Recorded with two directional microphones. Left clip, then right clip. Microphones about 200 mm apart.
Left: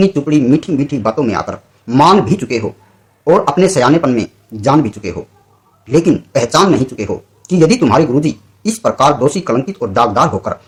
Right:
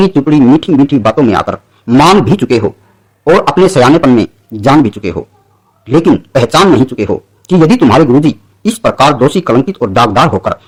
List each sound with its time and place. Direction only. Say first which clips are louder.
0.0 s speech: right 5 dB; 45° right (ahead or behind)